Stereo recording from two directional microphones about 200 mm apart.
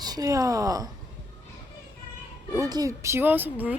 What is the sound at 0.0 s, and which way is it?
Speech, 20° right (ahead or behind).